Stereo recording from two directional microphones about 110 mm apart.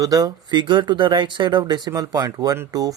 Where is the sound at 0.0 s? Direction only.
35° right (ahead or behind).